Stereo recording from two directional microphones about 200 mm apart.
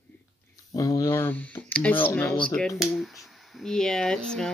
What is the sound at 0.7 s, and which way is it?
A child's voice, 15° left (ahead or behind).